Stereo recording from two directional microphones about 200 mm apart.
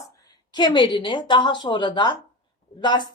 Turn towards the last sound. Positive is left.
turn(degrees=20)  # may be behind; listen again after turning